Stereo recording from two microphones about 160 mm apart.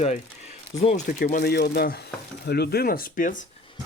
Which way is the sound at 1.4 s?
85° left.